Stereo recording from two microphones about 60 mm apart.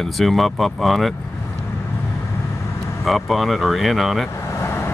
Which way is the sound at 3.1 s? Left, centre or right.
Centre.